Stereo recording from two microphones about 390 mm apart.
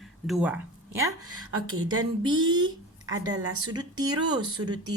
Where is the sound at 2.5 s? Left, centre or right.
Centre.